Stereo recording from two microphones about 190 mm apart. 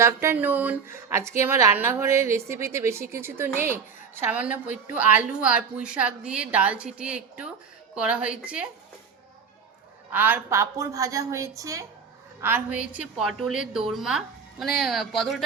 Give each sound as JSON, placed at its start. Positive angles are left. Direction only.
{"t": 0.0, "sound": "speech", "side_deg": -15}
{"t": 10.1, "sound": "a woman's voice", "side_deg": -10}